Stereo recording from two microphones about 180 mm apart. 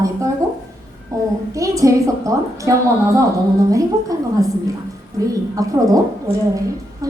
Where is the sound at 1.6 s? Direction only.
20° right (ahead or behind).